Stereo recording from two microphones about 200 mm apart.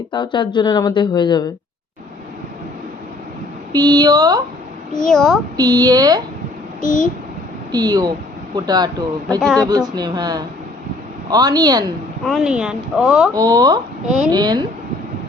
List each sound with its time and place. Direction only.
0.1 s speech: 25° left (ahead or behind)
3.7 s speech: 20° right (ahead or behind)
4.9 s speech: 5° left (ahead or behind)
5.5 s speech: 20° right (ahead or behind)
6.8 s a child's voice: 40° left (ahead or behind)
7.7 s speech: 20° right (ahead or behind)
12.2 s speech: centre (ahead or behind)
13.3 s speech: 20° right (ahead or behind)